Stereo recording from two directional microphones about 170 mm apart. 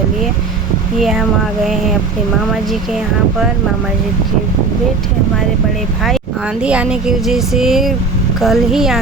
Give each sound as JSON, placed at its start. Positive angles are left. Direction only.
{"t": 6.6, "sound": "speech", "side_deg": -5}